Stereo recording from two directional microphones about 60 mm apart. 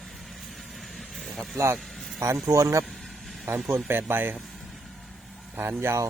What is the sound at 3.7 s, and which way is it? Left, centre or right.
Speech, right.